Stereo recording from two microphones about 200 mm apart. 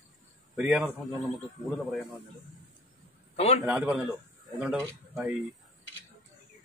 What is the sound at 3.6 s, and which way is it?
A man's voice, 5° right (ahead or behind).